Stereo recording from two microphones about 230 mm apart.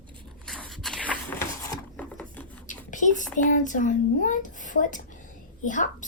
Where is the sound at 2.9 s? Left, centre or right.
Left.